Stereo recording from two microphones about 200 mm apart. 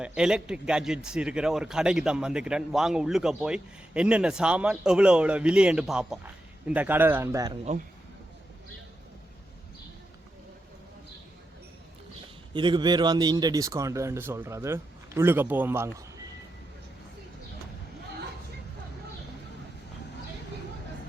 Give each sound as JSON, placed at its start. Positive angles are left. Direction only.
{"t": 0.0, "sound": "speech", "side_deg": -5}
{"t": 12.5, "sound": "speech", "side_deg": -25}